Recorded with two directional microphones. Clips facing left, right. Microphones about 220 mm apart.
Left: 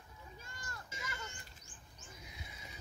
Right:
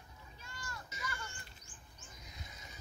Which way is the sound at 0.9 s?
20° left (ahead or behind).